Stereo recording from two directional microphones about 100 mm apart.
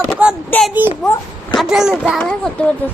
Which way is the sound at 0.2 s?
15° right (ahead or behind).